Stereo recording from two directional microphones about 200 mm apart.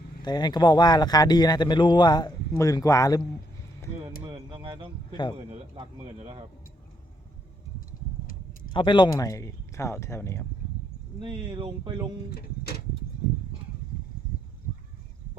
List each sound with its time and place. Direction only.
0.2 s speech: 20° left (ahead or behind)
4.2 s speech: 25° right (ahead or behind)
8.7 s speech: 25° left (ahead or behind)
11.2 s speech: 25° right (ahead or behind)
12.3 s speech: 50° left (ahead or behind)